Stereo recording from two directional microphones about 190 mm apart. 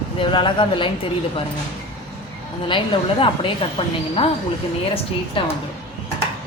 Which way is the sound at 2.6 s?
25° left (ahead or behind).